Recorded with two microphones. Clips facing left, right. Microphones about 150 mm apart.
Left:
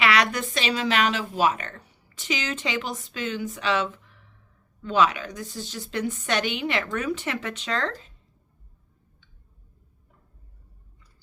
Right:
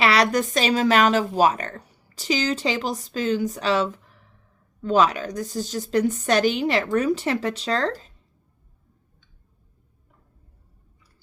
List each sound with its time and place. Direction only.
0.0 s speech: 35° right (ahead or behind)